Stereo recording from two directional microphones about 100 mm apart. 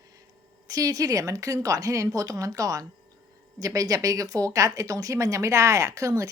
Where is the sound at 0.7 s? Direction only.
35° right (ahead or behind).